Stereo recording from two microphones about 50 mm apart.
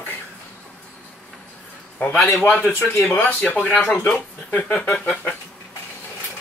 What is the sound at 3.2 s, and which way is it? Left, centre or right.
Speech, left.